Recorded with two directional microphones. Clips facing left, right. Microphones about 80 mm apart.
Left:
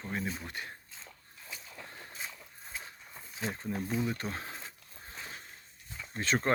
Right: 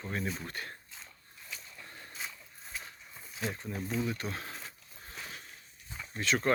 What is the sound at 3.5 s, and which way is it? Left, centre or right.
Speech, left.